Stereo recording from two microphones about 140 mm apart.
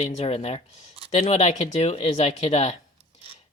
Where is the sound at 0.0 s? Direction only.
45° left (ahead or behind).